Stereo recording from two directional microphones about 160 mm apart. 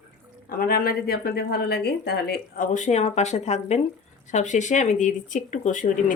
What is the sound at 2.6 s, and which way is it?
Speech, 50° left (ahead or behind).